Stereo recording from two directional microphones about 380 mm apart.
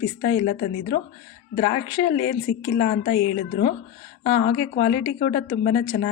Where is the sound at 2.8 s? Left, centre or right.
Left.